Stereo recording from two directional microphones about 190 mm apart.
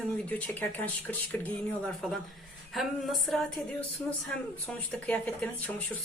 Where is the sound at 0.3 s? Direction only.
10° left (ahead or behind).